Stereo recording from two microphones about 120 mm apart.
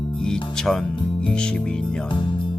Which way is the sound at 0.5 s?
5° left (ahead or behind).